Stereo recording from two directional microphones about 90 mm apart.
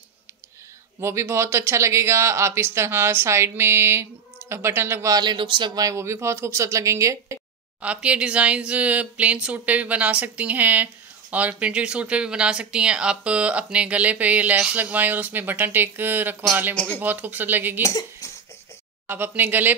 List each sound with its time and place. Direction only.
1.0 s speech: 30° right (ahead or behind)
5.1 s a man's voice: 60° right (ahead or behind)
5.8 s speech: 35° right (ahead or behind)
7.8 s speech: 15° right (ahead or behind)
17.8 s speech: 40° left (ahead or behind)
19.0 s speech: 20° right (ahead or behind)